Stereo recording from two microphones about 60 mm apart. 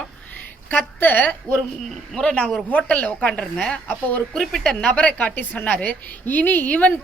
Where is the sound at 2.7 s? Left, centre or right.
Left.